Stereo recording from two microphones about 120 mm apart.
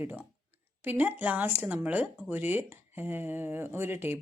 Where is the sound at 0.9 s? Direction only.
15° right (ahead or behind).